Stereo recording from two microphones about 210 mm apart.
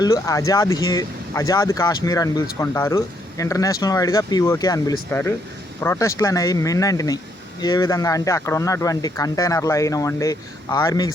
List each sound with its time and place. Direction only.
0.0 s speech: 15° left (ahead or behind)